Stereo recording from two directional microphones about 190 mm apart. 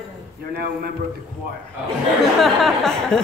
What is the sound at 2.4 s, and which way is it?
Speech, centre (ahead or behind).